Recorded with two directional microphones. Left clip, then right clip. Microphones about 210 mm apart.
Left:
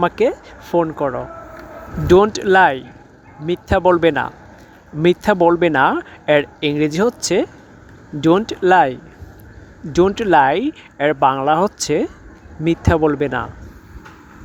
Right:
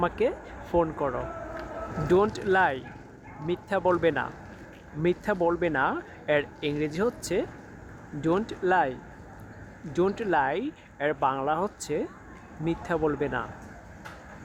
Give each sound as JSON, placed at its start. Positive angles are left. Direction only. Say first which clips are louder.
{"t": 0.0, "sound": "speech", "louder": "left 10 dB", "side_deg": 30}